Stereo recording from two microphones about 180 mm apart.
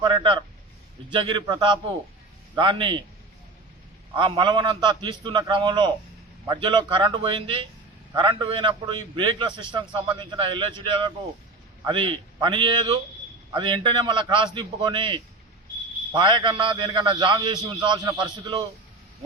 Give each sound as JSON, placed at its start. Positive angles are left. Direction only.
{"t": 0.0, "sound": "a man's voice", "side_deg": -25}
{"t": 4.1, "sound": "a man's voice", "side_deg": -25}